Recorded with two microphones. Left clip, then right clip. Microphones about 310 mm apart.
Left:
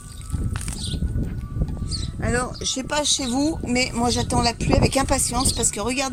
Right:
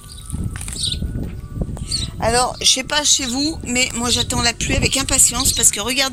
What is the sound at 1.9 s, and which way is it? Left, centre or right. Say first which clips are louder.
Speech: right 8 dB; centre.